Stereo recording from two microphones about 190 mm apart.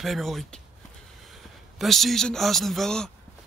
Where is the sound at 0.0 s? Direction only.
Centre (ahead or behind).